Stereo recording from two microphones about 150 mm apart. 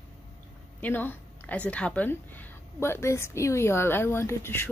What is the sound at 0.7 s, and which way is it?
A woman's voice, 10° left (ahead or behind).